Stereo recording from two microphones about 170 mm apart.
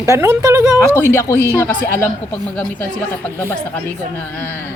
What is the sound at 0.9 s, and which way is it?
Speech, 15° left (ahead or behind).